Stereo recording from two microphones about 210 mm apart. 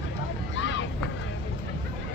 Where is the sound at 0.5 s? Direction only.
60° left (ahead or behind).